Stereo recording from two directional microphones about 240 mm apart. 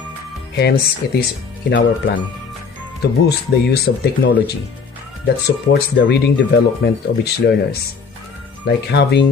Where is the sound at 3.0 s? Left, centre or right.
Left.